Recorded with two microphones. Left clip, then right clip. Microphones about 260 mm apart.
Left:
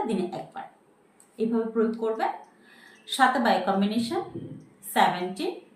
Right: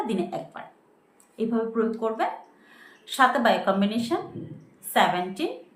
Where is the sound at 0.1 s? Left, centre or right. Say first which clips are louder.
Right 1 dB; centre.